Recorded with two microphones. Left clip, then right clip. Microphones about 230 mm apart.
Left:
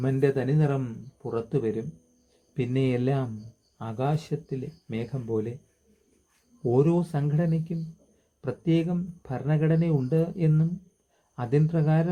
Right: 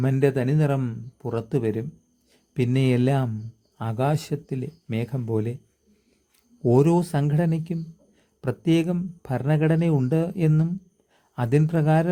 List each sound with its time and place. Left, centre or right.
0.0 s speech: right
6.6 s speech: right